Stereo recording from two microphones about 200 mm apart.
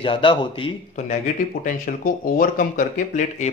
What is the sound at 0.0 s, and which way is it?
Speech, 25° left (ahead or behind).